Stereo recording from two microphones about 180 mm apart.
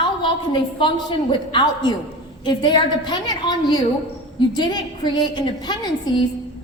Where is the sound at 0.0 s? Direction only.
25° left (ahead or behind).